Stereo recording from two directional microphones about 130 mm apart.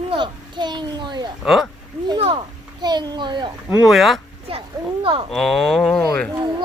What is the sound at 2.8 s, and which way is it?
Speech, 35° right (ahead or behind).